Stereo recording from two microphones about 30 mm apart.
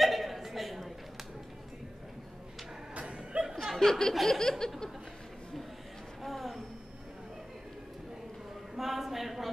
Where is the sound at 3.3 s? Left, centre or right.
Right.